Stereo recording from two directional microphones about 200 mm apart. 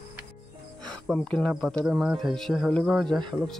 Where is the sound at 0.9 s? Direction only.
5° left (ahead or behind).